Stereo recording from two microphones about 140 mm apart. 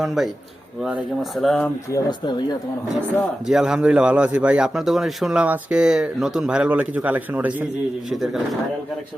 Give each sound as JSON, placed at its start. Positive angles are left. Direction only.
{"t": 0.0, "sound": "speech", "side_deg": 0}
{"t": 1.9, "sound": "speech", "side_deg": 30}
{"t": 3.4, "sound": "a man's voice", "side_deg": -5}